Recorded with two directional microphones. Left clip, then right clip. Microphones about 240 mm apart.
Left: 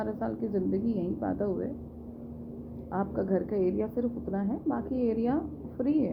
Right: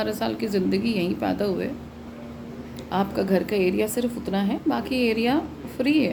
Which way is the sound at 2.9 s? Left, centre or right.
Right.